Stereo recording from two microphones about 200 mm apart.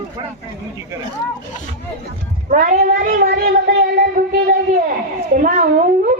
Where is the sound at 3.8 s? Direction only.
50° right (ahead or behind).